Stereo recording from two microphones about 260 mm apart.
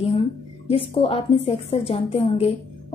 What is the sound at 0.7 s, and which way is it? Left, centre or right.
A woman's voice, left.